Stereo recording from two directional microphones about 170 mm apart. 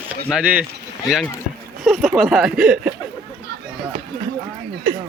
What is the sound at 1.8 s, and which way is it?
Speech, centre (ahead or behind).